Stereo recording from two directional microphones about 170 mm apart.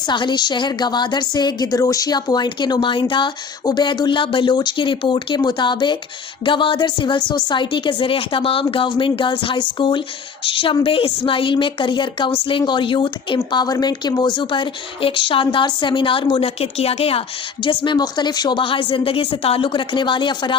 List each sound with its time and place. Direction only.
0.1 s a woman's voice: 25° left (ahead or behind)